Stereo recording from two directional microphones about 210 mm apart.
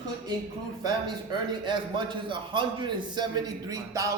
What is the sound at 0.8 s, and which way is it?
A man's voice, 20° right (ahead or behind).